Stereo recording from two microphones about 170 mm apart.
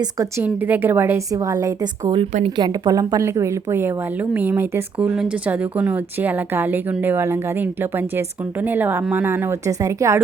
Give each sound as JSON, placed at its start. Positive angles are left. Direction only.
{"t": 0.0, "sound": "a woman's voice", "side_deg": -15}